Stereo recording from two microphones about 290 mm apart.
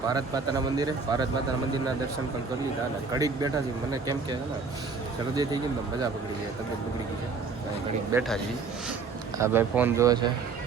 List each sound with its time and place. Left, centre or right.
0.1 s speech: centre
3.1 s speech: centre
8.1 s speech: centre
9.4 s speech: centre